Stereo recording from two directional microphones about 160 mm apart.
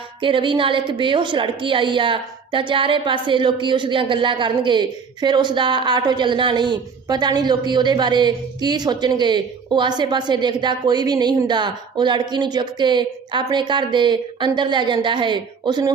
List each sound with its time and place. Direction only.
0.2 s a woman's voice: 30° right (ahead or behind)